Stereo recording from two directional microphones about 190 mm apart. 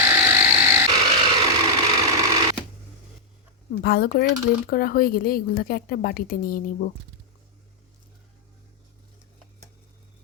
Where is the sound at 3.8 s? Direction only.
55° left (ahead or behind).